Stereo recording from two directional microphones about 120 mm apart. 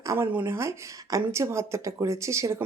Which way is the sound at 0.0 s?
25° right (ahead or behind).